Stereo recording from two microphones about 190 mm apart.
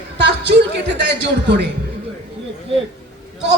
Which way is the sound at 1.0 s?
65° right (ahead or behind).